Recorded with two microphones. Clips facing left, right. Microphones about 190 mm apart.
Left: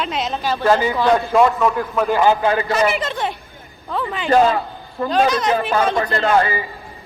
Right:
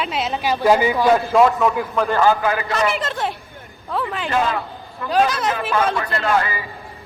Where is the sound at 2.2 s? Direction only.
25° left (ahead or behind).